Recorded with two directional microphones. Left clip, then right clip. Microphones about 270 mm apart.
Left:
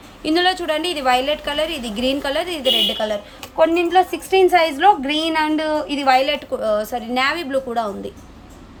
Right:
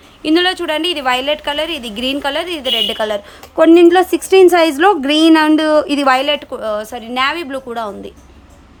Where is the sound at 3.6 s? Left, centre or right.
Right; by 8.1 s centre.